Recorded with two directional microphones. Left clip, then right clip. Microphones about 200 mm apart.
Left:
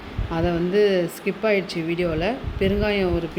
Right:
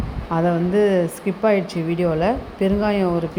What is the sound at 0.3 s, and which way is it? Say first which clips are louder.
Speech: right 3 dB; 5° right (ahead or behind).